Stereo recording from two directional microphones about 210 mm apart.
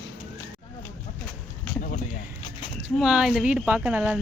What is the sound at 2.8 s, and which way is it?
Speech, 5° right (ahead or behind).